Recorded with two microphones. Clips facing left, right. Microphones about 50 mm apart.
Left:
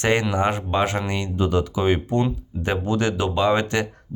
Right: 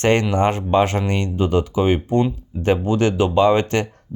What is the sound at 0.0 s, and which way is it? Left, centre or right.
Speech, right.